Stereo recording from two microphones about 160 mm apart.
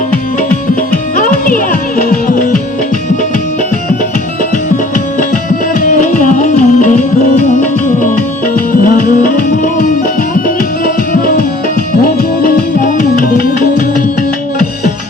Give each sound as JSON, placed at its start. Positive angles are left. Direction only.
{"t": 1.1, "sound": "music", "side_deg": 55}
{"t": 5.8, "sound": "music", "side_deg": 55}
{"t": 10.8, "sound": "music", "side_deg": 60}